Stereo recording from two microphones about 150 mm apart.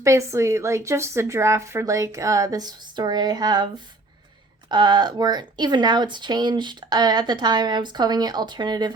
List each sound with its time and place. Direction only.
0.0 s speech: 20° right (ahead or behind)
4.7 s speech: 30° right (ahead or behind)